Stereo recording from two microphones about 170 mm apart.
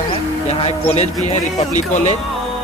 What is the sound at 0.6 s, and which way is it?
Speech, 40° left (ahead or behind).